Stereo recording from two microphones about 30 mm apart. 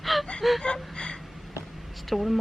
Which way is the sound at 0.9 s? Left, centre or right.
Left.